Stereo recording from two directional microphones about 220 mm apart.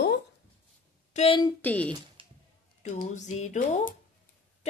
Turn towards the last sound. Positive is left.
turn(degrees=35)  # may be behind; listen again after turning